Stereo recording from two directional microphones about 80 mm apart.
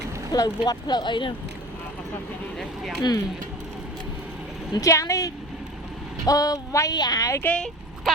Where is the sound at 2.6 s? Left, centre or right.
Centre.